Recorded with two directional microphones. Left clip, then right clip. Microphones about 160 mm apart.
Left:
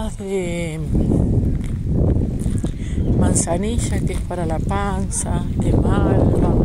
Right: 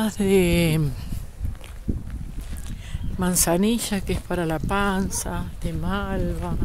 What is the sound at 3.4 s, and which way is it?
Speech, 30° right (ahead or behind).